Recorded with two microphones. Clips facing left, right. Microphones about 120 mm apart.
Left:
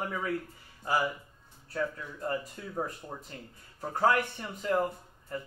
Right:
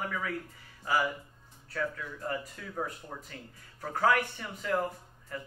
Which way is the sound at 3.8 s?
25° left (ahead or behind).